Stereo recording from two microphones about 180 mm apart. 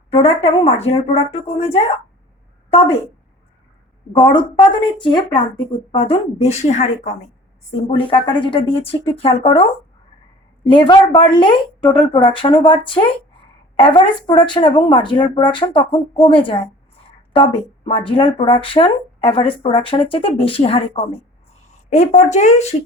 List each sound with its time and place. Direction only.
0.1 s a woman's voice: 30° left (ahead or behind)
4.2 s a woman's voice: 25° left (ahead or behind); by 7.3 s 40° left (ahead or behind)
7.8 s a woman's voice: 30° left (ahead or behind)
17.8 s a woman's voice: 30° left (ahead or behind)
21.8 s a woman's voice: 40° left (ahead or behind)